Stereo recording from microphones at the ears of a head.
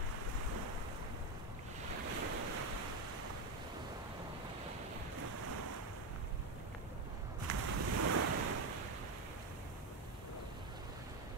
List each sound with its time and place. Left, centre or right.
1.9 s waves: right
5.3 s waves: right
7.4 s waves: right